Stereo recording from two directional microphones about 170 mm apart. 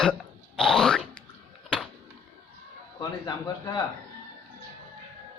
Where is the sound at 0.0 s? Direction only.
5° left (ahead or behind).